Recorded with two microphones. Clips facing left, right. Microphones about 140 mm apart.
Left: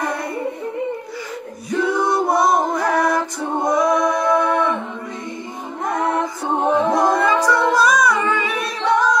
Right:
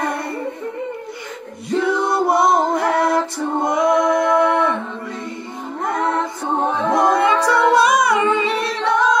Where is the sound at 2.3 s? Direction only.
25° right (ahead or behind).